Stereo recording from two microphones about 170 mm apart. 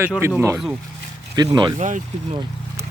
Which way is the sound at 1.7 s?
45° right (ahead or behind).